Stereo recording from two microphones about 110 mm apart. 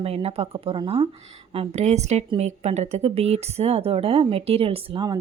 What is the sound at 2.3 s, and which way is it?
Speech, 75° right (ahead or behind).